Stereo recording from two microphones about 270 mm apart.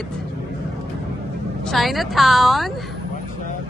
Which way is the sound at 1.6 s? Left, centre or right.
Centre.